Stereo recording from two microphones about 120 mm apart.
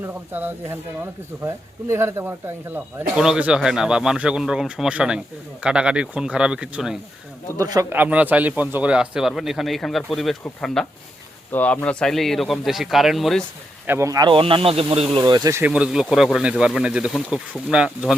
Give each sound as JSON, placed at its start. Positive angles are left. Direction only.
{"t": 0.0, "sound": "speech", "side_deg": -15}
{"t": 3.2, "sound": "speech", "side_deg": -5}
{"t": 7.6, "sound": "speech", "side_deg": -30}
{"t": 7.9, "sound": "speech", "side_deg": -15}
{"t": 13.8, "sound": "speech", "side_deg": -20}
{"t": 14.3, "sound": "speech", "side_deg": -45}
{"t": 15.2, "sound": "speech", "side_deg": -30}
{"t": 15.7, "sound": "speech", "side_deg": -5}